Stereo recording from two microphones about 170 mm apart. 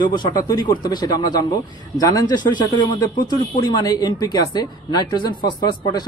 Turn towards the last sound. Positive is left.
turn(degrees=25)  # may be behind; listen again after turning